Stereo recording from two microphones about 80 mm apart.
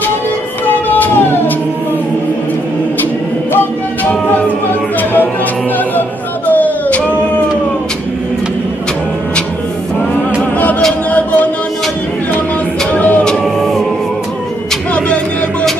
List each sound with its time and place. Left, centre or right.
0.7 s a sound: left
3.5 s music: left
5.9 s a sound: left
11.1 s music: left
12.9 s music: centre
13.4 s music: centre